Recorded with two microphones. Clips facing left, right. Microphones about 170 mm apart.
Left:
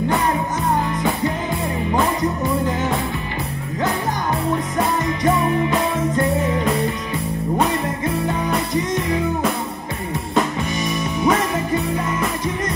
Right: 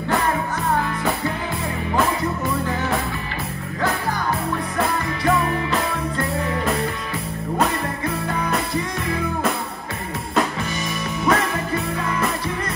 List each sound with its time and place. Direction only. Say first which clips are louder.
2.2 s music: left 3 dB; 20° left (ahead or behind)
4.7 s music: left 3 dB; 20° left (ahead or behind)
8.0 s music: left 3 dB; 20° left (ahead or behind)
11.2 s music: left 2 dB; 20° left (ahead or behind)